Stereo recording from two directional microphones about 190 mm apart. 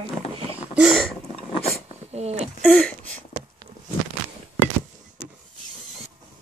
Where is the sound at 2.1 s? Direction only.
35° right (ahead or behind).